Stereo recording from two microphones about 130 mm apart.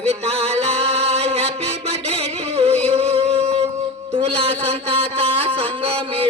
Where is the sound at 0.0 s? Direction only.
50° right (ahead or behind).